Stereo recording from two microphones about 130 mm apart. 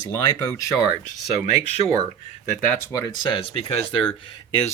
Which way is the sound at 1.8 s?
45° right (ahead or behind).